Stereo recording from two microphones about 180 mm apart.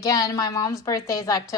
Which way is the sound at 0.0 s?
20° left (ahead or behind).